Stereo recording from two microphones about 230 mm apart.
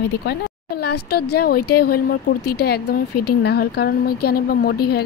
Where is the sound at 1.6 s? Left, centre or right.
Left.